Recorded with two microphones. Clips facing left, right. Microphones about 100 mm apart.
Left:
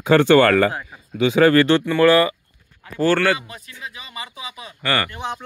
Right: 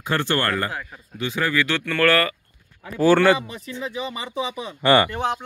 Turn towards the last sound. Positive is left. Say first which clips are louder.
# right 6 dB
turn(degrees=-25)  # may be behind; listen again after turning